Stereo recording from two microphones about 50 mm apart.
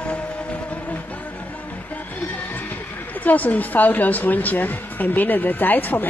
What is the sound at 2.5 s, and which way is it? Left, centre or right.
Speech, left.